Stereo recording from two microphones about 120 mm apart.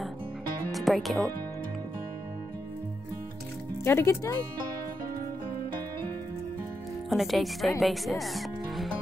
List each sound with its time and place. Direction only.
0.7 s music: centre (ahead or behind)
3.8 s speech: 20° left (ahead or behind)
7.1 s speech: centre (ahead or behind)